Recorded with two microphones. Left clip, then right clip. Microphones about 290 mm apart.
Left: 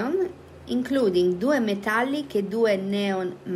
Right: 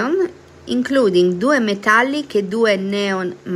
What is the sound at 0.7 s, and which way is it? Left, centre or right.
A woman's voice, centre.